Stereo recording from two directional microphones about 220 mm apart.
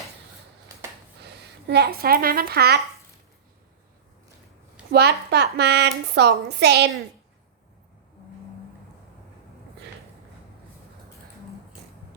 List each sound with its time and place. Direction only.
1.2 s speech: 50° right (ahead or behind)
4.9 s a woman's voice: 45° right (ahead or behind)